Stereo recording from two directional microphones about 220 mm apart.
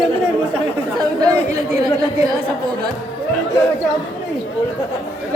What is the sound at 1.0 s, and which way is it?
Speech, 15° right (ahead or behind).